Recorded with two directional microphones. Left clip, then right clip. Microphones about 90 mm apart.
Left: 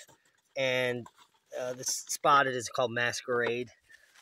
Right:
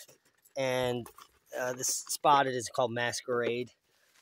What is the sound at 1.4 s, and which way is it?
Speech, 40° right (ahead or behind).